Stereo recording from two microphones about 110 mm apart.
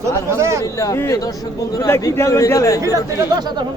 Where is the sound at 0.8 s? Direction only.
30° left (ahead or behind).